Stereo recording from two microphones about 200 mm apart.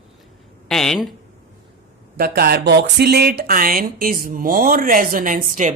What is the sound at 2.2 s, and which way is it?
Speech, 50° right (ahead or behind).